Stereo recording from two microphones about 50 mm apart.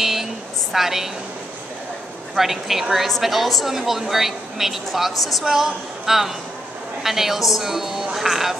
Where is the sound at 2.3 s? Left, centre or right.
Centre.